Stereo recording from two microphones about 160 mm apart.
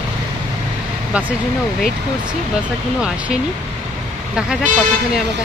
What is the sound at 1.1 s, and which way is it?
Speech, 10° right (ahead or behind).